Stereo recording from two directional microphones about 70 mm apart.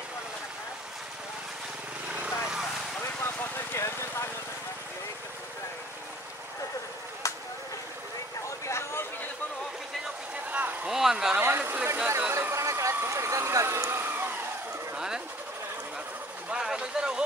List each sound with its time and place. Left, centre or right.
2.0 s vehicle: right
3.3 s vehicle: left
7.2 s a sound: left
8.5 s vehicle: left
10.5 s vehicle: right
10.9 s a sound: centre
11.3 s a sound: right
12.4 s vehicle: right
15.0 s sewing machine: centre
16.5 s vehicle: centre